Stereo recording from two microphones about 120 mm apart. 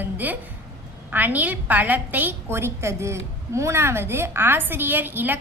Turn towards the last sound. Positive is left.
turn(degrees=-15)  # may be behind; listen again after turning